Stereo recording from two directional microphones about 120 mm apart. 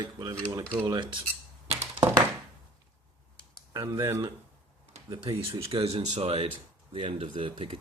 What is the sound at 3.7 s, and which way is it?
Speech, 30° right (ahead or behind).